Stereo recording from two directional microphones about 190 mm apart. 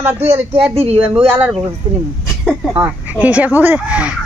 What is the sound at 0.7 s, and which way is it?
Speech, 30° right (ahead or behind).